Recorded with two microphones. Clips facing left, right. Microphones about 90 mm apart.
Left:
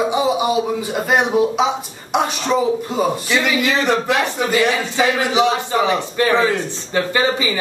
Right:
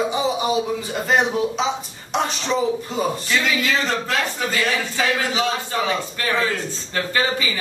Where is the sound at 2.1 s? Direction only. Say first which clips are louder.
Left 4 dB; 15° left (ahead or behind).